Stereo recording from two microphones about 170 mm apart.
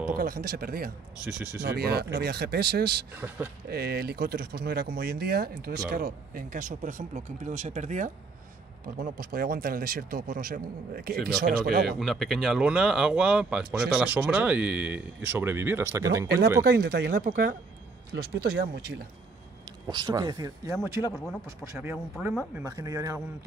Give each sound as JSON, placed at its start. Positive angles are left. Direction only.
{"t": 0.1, "sound": "speech", "side_deg": -60}
{"t": 3.2, "sound": "speech", "side_deg": -10}
{"t": 3.6, "sound": "speech", "side_deg": -65}
{"t": 8.8, "sound": "speech", "side_deg": -60}
{"t": 12.0, "sound": "speech", "side_deg": 0}
{"t": 16.6, "sound": "speech", "side_deg": -65}
{"t": 18.1, "sound": "speech", "side_deg": -70}
{"t": 19.9, "sound": "speech", "side_deg": -25}
{"t": 22.6, "sound": "speech", "side_deg": -20}